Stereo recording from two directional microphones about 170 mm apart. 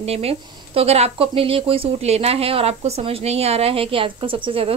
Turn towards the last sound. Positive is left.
turn(degrees=-30)  # may be behind; listen again after turning